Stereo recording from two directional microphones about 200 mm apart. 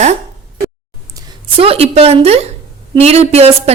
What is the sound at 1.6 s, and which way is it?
A woman's voice, 30° right (ahead or behind).